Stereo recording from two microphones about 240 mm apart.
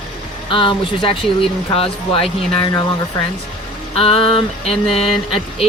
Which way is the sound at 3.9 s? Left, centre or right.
Left.